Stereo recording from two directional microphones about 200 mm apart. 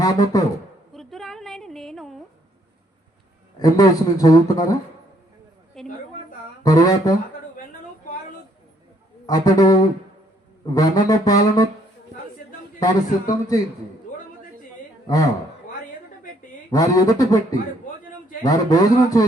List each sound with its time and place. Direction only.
0.3 s speech: 20° left (ahead or behind)
0.9 s a sound: centre (ahead or behind)
3.6 s a man's voice: 20° left (ahead or behind)
5.8 s a sound: centre (ahead or behind)
6.6 s a man's voice: 20° left (ahead or behind)
9.2 s a man's voice: 20° left (ahead or behind)
10.8 s speech: 20° left (ahead or behind)
12.8 s speech: 20° left (ahead or behind)
14.1 s a sound: 40° left (ahead or behind)
15.0 s a man's voice: 15° left (ahead or behind)
16.7 s speech: 20° left (ahead or behind)
18.4 s a man's voice: 20° left (ahead or behind)